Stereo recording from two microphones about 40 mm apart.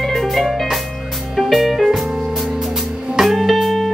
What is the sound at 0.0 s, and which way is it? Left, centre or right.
Music, centre.